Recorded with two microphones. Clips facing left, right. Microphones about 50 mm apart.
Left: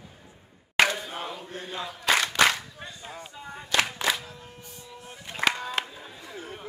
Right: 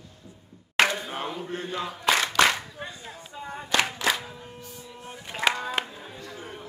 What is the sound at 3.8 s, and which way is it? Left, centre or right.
Singing, centre.